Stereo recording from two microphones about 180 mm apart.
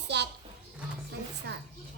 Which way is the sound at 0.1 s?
70° right (ahead or behind).